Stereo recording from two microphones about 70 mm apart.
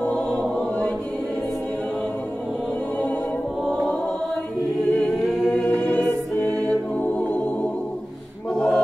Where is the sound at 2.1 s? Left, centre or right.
Left.